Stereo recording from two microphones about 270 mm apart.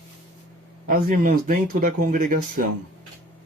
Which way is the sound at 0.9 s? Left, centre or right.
Right.